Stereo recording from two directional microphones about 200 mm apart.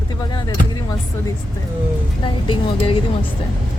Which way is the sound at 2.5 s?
25° left (ahead or behind).